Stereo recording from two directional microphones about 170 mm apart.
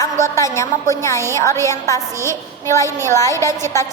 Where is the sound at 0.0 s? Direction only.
15° left (ahead or behind).